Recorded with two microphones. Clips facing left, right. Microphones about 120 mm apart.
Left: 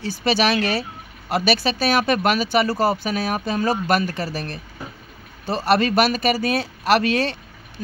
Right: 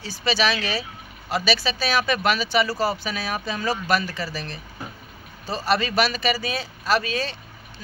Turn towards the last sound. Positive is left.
turn(degrees=65)  # may be behind; listen again after turning